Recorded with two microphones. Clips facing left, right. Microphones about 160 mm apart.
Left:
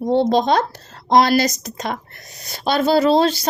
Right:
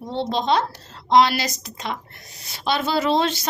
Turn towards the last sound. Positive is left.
turn(degrees=35)  # may be behind; listen again after turning